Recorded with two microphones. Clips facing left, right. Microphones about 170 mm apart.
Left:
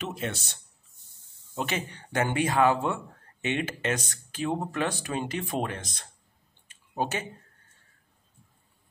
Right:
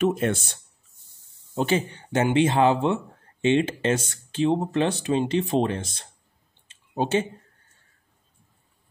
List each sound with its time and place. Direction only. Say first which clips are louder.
0.0 s speech: right 11 dB; 50° right (ahead or behind)
1.5 s speech: right 8 dB; 30° right (ahead or behind)
6.7 s a sound: right 7 dB; 25° right (ahead or behind)